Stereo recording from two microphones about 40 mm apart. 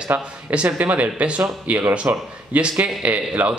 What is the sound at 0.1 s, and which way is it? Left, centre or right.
Speech, right.